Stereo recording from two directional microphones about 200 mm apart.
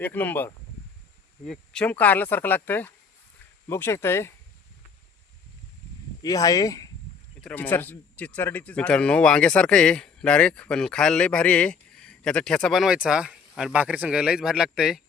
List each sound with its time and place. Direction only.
0.0 s speech: 10° left (ahead or behind)
6.2 s speech: 15° left (ahead or behind); by 15.0 s 5° right (ahead or behind)